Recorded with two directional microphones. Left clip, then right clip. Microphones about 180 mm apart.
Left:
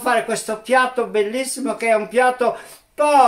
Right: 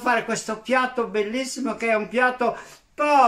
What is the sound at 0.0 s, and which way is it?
Speech, 5° left (ahead or behind).